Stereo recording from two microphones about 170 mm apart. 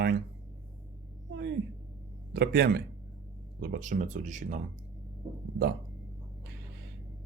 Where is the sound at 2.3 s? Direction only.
70° right (ahead or behind); by 4.6 s 50° right (ahead or behind).